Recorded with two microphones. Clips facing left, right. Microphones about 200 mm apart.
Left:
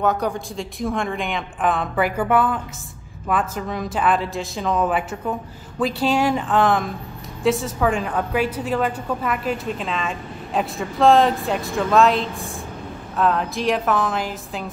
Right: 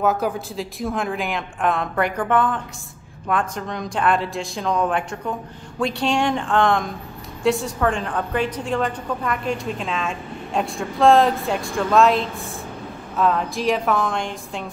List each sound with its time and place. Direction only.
0.0 s a woman's voice: 5° right (ahead or behind)